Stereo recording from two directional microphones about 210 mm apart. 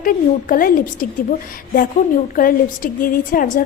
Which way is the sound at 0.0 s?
40° left (ahead or behind).